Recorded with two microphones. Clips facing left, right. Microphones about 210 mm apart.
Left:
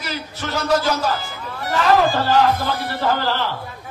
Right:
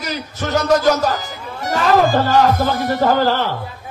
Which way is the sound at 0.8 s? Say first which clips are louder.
Right 5 dB; 45° right (ahead or behind).